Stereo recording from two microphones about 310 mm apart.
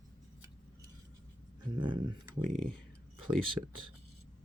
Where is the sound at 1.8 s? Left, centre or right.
Centre.